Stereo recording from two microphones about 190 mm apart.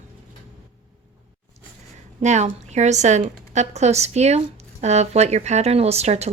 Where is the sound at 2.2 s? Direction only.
35° right (ahead or behind).